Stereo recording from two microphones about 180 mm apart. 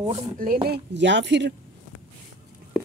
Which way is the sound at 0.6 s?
70° right (ahead or behind).